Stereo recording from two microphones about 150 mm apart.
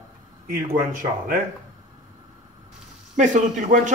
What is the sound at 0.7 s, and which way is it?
Speech, 70° right (ahead or behind).